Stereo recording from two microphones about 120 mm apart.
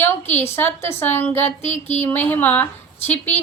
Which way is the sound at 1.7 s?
70° left (ahead or behind).